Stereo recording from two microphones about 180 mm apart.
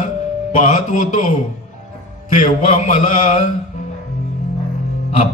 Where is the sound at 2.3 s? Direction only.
45° left (ahead or behind).